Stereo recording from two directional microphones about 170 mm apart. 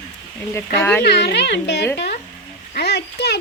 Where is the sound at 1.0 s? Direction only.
75° left (ahead or behind).